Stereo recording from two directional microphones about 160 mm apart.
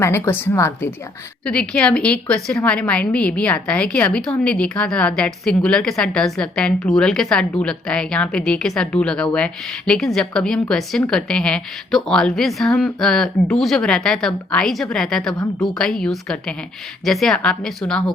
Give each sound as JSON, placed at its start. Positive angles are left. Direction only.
{"t": 0.0, "sound": "a woman's voice", "side_deg": 15}
{"t": 15.4, "sound": "a woman's voice", "side_deg": 20}
{"t": 15.8, "sound": "a woman's voice", "side_deg": 5}